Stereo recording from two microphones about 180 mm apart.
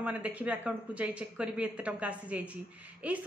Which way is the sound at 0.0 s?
5° right (ahead or behind).